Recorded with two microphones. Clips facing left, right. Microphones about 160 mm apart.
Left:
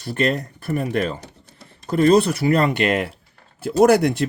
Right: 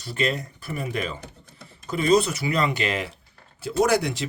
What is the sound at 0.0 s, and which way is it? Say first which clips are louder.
Speech: left 5 dB; 55° left (ahead or behind).